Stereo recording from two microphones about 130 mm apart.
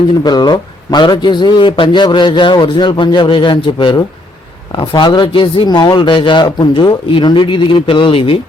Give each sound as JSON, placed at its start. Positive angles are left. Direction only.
{"t": 0.2, "sound": "a man's voice", "side_deg": 35}